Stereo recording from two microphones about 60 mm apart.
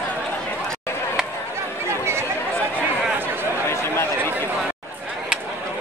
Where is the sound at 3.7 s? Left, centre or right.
Left.